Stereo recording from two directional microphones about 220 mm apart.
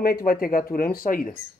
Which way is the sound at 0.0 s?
40° left (ahead or behind).